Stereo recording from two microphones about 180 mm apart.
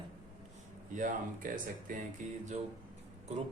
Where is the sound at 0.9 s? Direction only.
45° right (ahead or behind).